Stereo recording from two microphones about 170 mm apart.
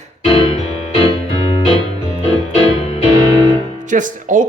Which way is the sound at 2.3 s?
35° left (ahead or behind).